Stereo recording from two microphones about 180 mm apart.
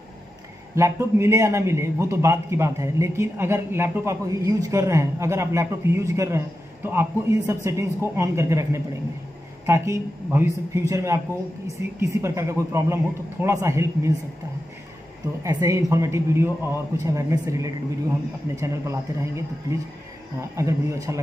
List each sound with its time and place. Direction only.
0.7 s a man's voice: 15° right (ahead or behind)
15.4 s a man's voice: 15° right (ahead or behind)